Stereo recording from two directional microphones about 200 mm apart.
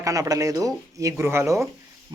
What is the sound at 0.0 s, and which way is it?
Speech, 15° right (ahead or behind).